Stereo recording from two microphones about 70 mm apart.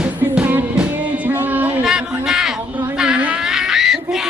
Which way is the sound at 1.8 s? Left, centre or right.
Centre.